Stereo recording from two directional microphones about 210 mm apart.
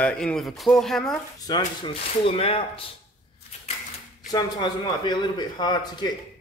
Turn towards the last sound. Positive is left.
turn(degrees=20)  # may be behind; listen again after turning